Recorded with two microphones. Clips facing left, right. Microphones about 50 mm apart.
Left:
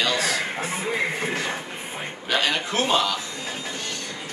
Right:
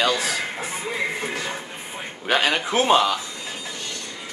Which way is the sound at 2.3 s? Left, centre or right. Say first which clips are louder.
Right 3 dB; right.